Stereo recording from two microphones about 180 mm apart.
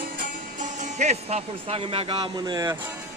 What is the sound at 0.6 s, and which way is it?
Speech, 40° right (ahead or behind).